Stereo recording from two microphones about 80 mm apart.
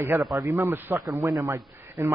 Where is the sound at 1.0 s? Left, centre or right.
Right.